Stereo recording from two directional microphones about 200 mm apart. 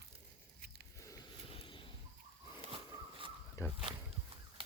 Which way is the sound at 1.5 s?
25° left (ahead or behind).